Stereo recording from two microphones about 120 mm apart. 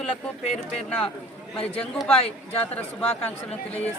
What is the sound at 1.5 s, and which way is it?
Speech, 55° left (ahead or behind).